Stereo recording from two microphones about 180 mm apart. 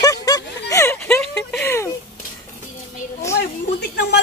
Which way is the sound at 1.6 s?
15° left (ahead or behind).